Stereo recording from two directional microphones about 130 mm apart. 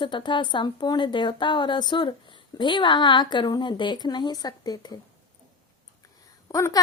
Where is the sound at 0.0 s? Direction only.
35° left (ahead or behind).